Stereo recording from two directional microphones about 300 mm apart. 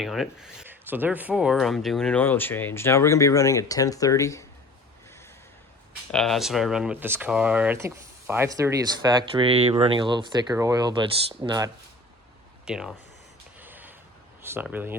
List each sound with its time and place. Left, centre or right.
0.0 s speech: centre
6.1 s speech: centre
12.6 s speech: centre
13.6 s a sound: centre
14.4 s speech: centre